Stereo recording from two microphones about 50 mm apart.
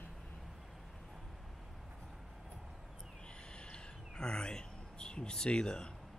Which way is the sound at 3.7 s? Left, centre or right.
Centre.